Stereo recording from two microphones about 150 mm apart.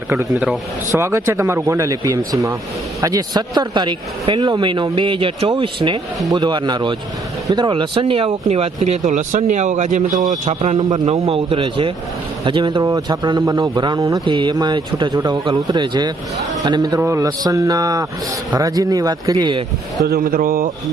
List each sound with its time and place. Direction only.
0.3 s speech: 10° right (ahead or behind)
0.9 s a man's voice: 20° right (ahead or behind); by 10.8 s 45° right (ahead or behind)
10.8 s a man's voice: 25° right (ahead or behind)
20.1 s speech: 80° right